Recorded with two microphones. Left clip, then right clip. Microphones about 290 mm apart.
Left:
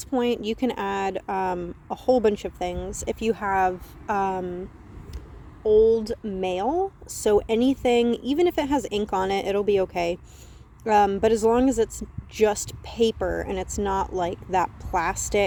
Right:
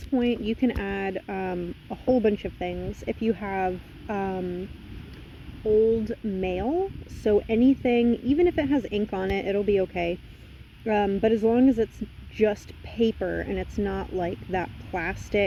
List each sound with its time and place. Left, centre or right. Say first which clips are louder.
0.1 s speech: left 2 dB; left
6.1 s speech: left 2 dB; left